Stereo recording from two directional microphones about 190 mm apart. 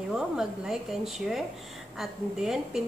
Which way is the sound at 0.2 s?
Centre (ahead or behind).